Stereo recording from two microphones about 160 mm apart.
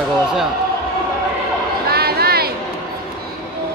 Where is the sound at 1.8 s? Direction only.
75° right (ahead or behind).